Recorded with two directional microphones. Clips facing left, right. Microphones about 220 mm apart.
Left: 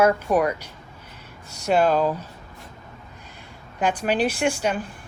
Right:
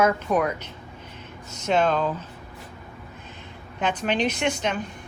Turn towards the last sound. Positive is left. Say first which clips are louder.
# left 2 dB
turn(degrees=10)  # may be behind; listen again after turning